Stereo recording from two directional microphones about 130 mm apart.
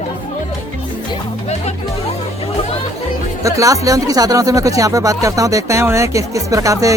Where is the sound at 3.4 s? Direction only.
25° right (ahead or behind).